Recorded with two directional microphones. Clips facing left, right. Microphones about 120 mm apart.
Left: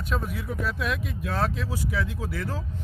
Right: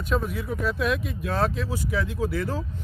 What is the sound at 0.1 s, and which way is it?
Speech, centre (ahead or behind).